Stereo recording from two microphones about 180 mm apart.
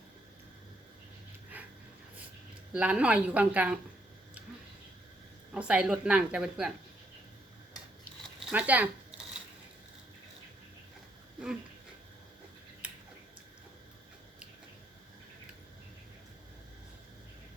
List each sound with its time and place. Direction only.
1.5 s dog: 10° right (ahead or behind)
2.7 s a woman's voice: 5° right (ahead or behind)
5.5 s a woman's voice: 5° right (ahead or behind)
8.4 s a woman's voice: 5° right (ahead or behind)